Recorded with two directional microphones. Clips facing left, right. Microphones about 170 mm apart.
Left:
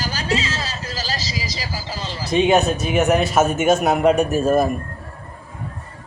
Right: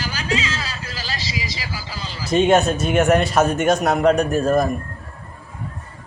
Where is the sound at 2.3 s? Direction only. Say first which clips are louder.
Right 1 dB; centre (ahead or behind).